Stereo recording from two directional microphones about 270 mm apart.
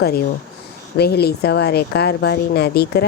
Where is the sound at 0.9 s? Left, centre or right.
Left.